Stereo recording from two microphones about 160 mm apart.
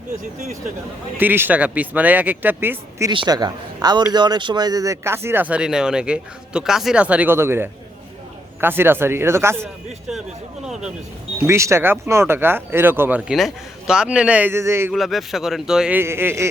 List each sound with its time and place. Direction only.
1.2 s speech: 10° right (ahead or behind)
3.1 s a man's voice: 25° right (ahead or behind)
10.1 s speech: 5° right (ahead or behind)
11.4 s speech: 15° right (ahead or behind)
14.9 s speech: centre (ahead or behind); by 16.5 s 15° right (ahead or behind)